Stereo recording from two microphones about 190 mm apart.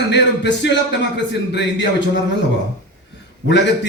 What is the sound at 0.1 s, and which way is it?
A man's voice, 70° left (ahead or behind).